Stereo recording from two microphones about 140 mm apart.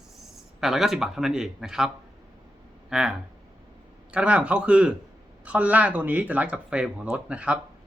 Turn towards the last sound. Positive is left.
turn(degrees=-10)  # may be behind; listen again after turning